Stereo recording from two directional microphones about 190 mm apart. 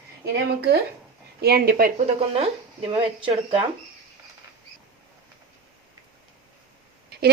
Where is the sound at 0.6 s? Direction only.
60° right (ahead or behind); by 3.6 s 25° right (ahead or behind).